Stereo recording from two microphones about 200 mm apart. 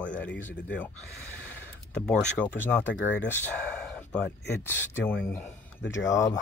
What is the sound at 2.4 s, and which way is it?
Speech, 10° left (ahead or behind).